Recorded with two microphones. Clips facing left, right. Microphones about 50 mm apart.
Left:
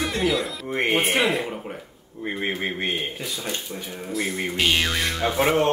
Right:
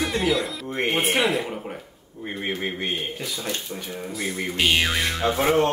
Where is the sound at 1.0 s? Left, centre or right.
Centre.